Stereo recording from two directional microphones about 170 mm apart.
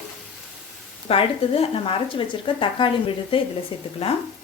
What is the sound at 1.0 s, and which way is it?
Speech, 35° left (ahead or behind).